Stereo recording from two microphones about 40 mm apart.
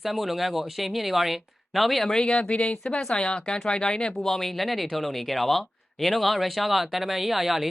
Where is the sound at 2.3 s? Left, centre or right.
Left.